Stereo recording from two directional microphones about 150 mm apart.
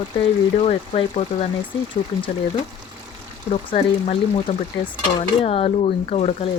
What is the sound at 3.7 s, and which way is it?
Speech, 45° left (ahead or behind).